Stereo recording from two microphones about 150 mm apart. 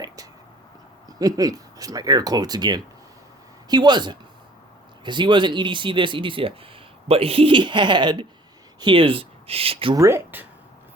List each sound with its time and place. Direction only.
1.0 s speech: 25° right (ahead or behind)
9.9 s speech: 20° right (ahead or behind)